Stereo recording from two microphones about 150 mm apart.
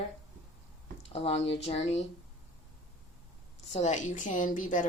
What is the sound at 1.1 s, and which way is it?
Speech, 40° left (ahead or behind).